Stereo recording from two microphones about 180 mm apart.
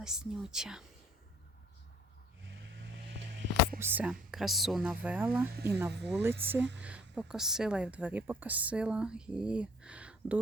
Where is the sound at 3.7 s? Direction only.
10° right (ahead or behind).